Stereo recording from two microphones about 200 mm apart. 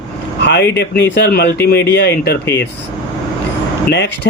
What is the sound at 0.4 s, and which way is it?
Speech, 60° left (ahead or behind).